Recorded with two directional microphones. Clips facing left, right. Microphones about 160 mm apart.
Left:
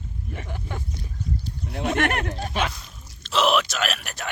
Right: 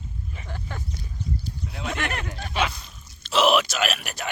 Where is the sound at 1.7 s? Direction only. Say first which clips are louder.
Left 7 dB; 55° left (ahead or behind).